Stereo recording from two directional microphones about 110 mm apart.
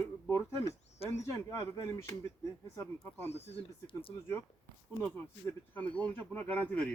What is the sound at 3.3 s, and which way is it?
Speech, 65° left (ahead or behind).